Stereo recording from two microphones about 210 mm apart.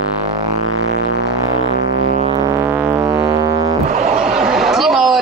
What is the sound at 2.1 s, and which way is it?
Music, 30° right (ahead or behind).